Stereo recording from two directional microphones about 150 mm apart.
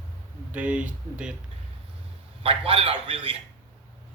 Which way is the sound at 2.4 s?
40° right (ahead or behind).